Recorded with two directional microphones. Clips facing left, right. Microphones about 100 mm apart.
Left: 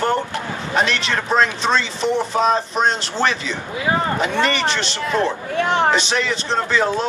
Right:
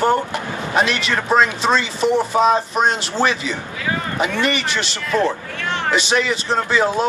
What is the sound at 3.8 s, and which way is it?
Speech, 25° left (ahead or behind).